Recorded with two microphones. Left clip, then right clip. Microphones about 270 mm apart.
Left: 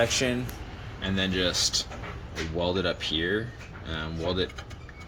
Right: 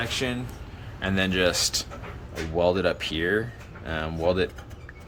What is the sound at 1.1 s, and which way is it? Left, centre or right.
Speech, centre.